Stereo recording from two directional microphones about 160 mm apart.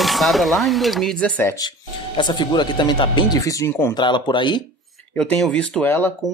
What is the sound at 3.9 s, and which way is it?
Speech, 30° left (ahead or behind).